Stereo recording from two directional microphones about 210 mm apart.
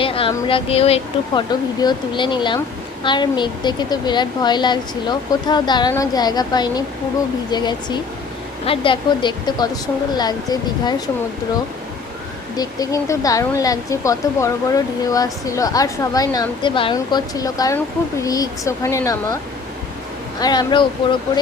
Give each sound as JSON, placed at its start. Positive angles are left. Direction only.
{"t": 0.0, "sound": "a woman's voice", "side_deg": 25}
{"t": 12.5, "sound": "speech", "side_deg": 15}
{"t": 20.4, "sound": "a woman's voice", "side_deg": 20}